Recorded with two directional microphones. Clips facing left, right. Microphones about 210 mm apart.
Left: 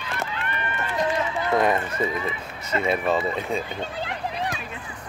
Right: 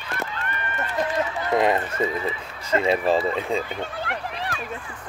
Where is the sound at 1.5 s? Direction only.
25° right (ahead or behind).